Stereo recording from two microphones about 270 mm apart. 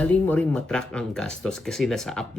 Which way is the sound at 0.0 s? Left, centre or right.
Centre.